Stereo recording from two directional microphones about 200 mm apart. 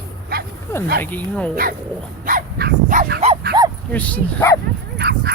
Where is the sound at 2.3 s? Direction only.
45° right (ahead or behind).